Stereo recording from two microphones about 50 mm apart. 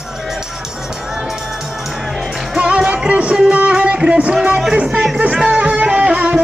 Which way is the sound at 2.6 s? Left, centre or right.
Right.